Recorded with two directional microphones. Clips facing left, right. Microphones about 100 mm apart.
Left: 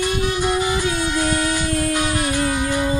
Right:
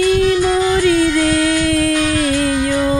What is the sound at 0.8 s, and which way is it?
Music, 90° right.